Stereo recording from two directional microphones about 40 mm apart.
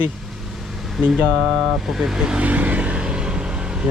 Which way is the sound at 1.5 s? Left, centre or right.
Centre.